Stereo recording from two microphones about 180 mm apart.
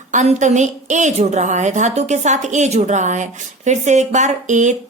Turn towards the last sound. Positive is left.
turn(degrees=-40)  # may be behind; listen again after turning